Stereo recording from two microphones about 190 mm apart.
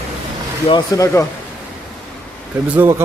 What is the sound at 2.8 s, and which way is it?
Speech, 15° right (ahead or behind).